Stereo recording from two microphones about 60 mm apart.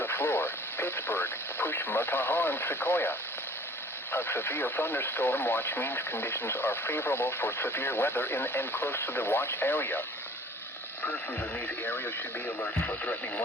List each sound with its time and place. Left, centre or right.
0.0 s speech: left
11.0 s speech: left